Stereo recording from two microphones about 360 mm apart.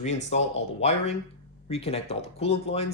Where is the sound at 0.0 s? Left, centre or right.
Centre.